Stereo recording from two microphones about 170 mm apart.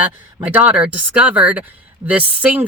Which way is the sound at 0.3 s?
10° right (ahead or behind).